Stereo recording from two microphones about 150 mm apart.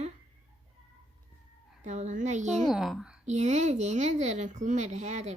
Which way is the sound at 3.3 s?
50° right (ahead or behind).